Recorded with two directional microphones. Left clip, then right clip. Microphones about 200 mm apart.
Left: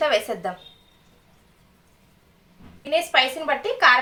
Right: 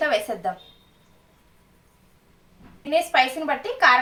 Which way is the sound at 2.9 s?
20° left (ahead or behind).